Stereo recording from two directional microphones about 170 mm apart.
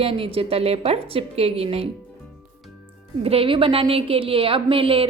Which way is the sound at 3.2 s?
35° right (ahead or behind).